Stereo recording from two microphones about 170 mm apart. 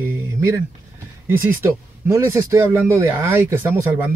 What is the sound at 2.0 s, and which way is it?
Speech, 15° right (ahead or behind).